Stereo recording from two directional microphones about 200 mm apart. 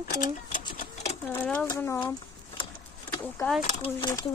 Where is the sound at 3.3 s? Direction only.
5° left (ahead or behind).